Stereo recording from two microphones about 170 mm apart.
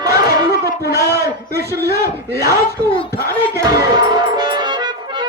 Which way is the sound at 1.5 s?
70° right (ahead or behind).